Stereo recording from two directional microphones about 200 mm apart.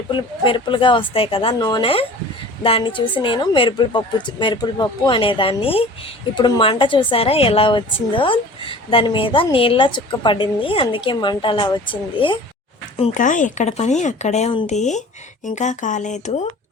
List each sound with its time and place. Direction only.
0.1 s a woman's voice: 25° left (ahead or behind)
13.0 s speech: 40° left (ahead or behind)